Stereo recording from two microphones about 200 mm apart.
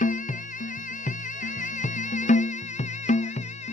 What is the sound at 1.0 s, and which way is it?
Music, 40° left (ahead or behind).